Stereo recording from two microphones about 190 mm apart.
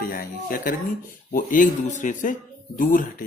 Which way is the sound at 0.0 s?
50° left (ahead or behind).